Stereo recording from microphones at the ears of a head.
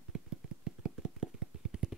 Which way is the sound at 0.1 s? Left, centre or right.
Right.